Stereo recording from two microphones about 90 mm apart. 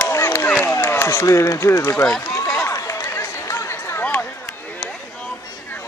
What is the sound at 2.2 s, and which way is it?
Run, 40° left (ahead or behind).